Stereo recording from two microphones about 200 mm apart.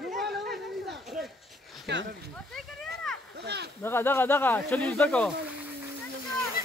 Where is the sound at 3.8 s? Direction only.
10° left (ahead or behind).